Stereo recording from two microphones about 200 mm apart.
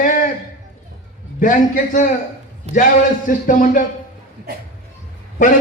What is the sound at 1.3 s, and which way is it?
Speech, 40° left (ahead or behind).